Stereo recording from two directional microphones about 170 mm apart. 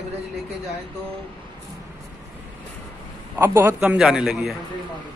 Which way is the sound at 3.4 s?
15° right (ahead or behind).